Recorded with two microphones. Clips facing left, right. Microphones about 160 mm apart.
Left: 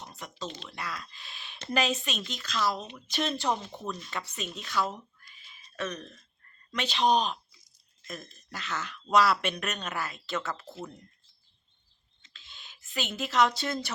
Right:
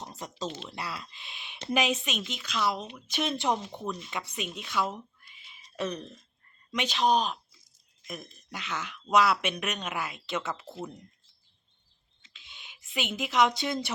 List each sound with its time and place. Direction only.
0.0 s a sound: 35° right (ahead or behind)
0.4 s speech: 5° right (ahead or behind)
0.7 s speech: 25° right (ahead or behind)
5.7 s speech: 30° right (ahead or behind)
6.7 s speech: 10° right (ahead or behind)
8.0 s speech: 15° right (ahead or behind)
12.2 s a sound: 15° right (ahead or behind)